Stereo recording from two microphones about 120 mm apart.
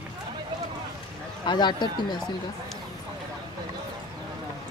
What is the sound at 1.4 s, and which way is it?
Speech, 35° left (ahead or behind).